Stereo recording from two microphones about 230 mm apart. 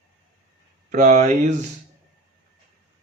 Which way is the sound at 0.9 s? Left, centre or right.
Right.